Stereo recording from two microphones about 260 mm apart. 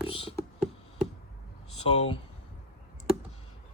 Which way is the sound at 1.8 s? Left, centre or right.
Left.